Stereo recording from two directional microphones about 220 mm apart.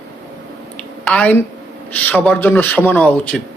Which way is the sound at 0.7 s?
5° left (ahead or behind).